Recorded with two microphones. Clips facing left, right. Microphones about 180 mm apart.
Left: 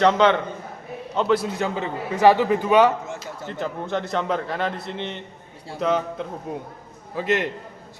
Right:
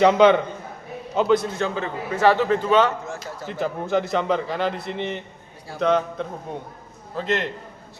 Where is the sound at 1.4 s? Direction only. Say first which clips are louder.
Even; 15° left (ahead or behind).